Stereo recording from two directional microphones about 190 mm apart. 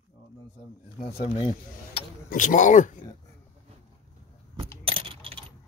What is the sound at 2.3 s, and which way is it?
Speech, 40° left (ahead or behind).